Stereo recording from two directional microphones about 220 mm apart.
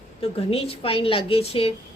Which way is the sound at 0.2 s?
25° left (ahead or behind).